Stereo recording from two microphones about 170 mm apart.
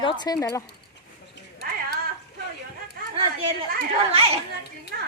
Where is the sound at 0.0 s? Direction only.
25° left (ahead or behind).